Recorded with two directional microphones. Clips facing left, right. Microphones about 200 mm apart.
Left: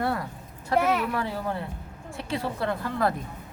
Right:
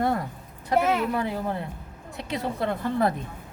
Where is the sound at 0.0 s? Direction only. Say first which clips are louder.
Right 3 dB; 20° right (ahead or behind).